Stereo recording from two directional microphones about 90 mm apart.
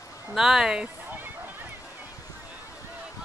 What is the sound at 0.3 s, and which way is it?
Speech, 5° right (ahead or behind).